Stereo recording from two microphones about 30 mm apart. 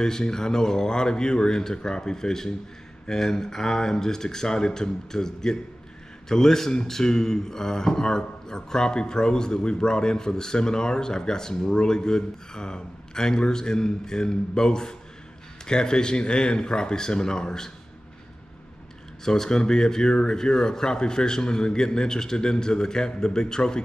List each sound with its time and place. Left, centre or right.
0.0 s speech: centre
19.2 s speech: centre